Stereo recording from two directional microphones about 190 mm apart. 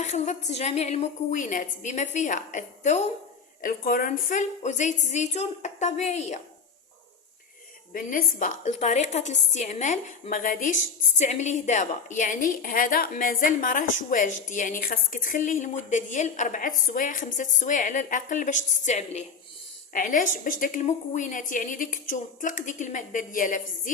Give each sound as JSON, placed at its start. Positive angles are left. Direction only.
{"t": 0.0, "sound": "a woman's voice", "side_deg": 35}
{"t": 7.9, "sound": "a woman's voice", "side_deg": 45}